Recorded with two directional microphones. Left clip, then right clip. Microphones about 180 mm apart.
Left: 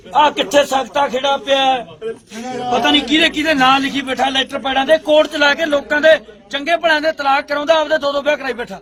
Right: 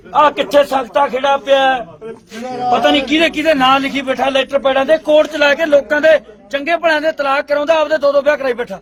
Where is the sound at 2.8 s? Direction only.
40° right (ahead or behind).